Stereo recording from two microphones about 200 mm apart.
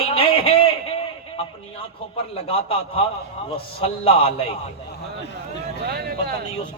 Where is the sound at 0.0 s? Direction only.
25° left (ahead or behind).